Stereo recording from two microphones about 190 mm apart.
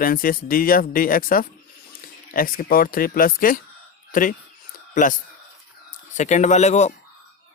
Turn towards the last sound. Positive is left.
turn(degrees=35)  # may be behind; listen again after turning